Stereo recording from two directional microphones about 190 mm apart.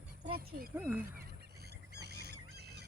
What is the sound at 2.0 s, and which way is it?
Squawk, 60° right (ahead or behind).